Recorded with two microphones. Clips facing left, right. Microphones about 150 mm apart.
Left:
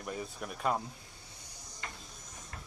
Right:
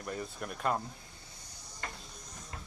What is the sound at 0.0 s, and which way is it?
Speech, 5° left (ahead or behind).